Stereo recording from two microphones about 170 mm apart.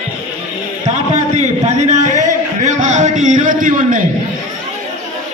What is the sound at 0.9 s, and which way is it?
Speech, 45° right (ahead or behind).